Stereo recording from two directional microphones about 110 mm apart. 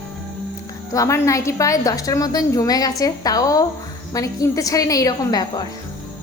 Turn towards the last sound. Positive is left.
turn(degrees=35)  # may be behind; listen again after turning